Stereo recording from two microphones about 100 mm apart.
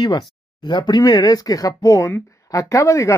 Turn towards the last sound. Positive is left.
turn(degrees=30)  # may be behind; listen again after turning